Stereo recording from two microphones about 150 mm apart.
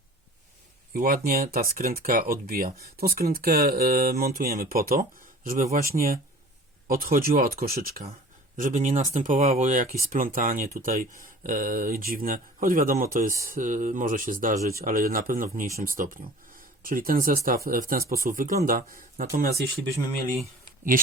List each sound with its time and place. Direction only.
0.9 s speech: 75° right (ahead or behind)
8.5 s speech: 60° right (ahead or behind)